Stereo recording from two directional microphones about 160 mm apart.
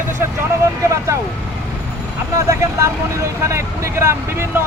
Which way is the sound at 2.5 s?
20° right (ahead or behind).